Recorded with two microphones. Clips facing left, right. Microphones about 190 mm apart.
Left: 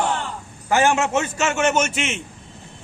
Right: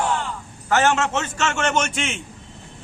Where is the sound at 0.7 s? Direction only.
10° left (ahead or behind).